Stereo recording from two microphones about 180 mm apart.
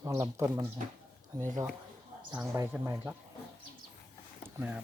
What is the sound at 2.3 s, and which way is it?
Speech, 5° right (ahead or behind).